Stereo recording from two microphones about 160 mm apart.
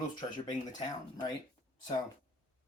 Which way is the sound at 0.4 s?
25° left (ahead or behind).